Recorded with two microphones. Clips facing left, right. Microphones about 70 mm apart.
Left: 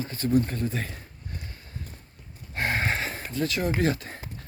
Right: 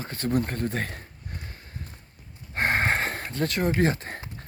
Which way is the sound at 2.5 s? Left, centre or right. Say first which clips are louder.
Right 3 dB; right.